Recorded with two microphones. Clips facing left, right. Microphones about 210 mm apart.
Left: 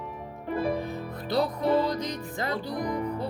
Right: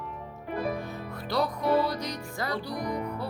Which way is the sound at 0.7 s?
20° left (ahead or behind).